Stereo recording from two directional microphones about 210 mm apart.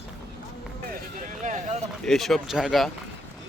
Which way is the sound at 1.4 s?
35° right (ahead or behind).